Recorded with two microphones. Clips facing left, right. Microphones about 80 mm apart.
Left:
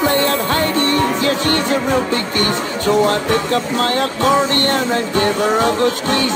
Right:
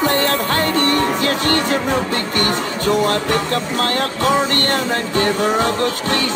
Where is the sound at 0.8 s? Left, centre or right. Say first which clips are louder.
Left 1 dB; right.